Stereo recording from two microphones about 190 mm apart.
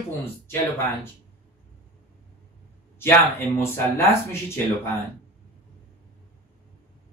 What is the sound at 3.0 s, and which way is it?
Speech, 10° left (ahead or behind).